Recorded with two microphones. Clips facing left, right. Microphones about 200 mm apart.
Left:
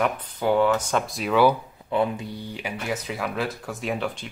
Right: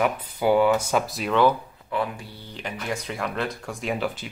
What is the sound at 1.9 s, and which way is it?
Speech, 20° left (ahead or behind).